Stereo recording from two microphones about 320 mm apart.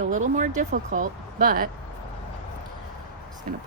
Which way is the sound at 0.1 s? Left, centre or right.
Right.